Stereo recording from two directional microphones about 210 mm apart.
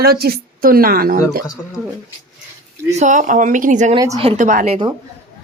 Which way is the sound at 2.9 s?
35° right (ahead or behind).